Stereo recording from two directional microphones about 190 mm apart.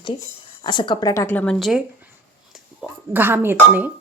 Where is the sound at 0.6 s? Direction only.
25° left (ahead or behind); by 3.9 s 10° right (ahead or behind).